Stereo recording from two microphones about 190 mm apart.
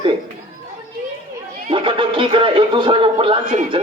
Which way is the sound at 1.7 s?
25° right (ahead or behind).